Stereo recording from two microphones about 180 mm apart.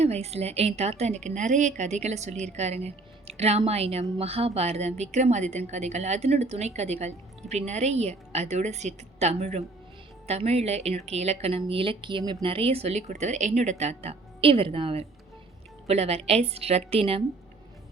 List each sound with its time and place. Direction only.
0.0 s a woman's voice: 35° right (ahead or behind)